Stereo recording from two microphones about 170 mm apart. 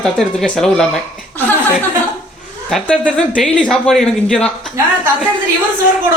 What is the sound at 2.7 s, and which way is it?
Speech, 5° left (ahead or behind).